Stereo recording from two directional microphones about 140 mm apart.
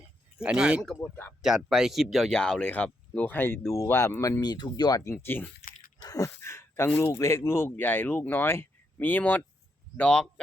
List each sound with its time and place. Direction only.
0.3 s speech: 5° right (ahead or behind)
1.0 s speech: 10° left (ahead or behind)
1.4 s speech: 5° right (ahead or behind); by 5.5 s 15° left (ahead or behind)
6.0 s speech: 25° left (ahead or behind); by 10.4 s 5° left (ahead or behind)